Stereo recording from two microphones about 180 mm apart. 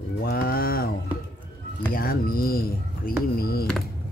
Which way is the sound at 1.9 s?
55° left (ahead or behind).